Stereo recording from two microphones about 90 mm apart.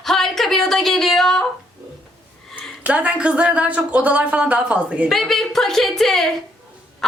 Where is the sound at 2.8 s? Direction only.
15° right (ahead or behind).